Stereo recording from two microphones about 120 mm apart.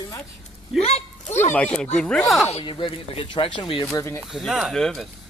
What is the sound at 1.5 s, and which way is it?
Speech, 10° left (ahead or behind).